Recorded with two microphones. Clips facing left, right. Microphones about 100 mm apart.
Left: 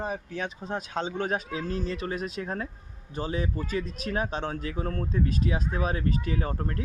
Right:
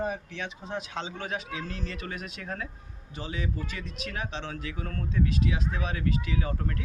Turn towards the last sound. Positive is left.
turn(degrees=35)  # may be behind; listen again after turning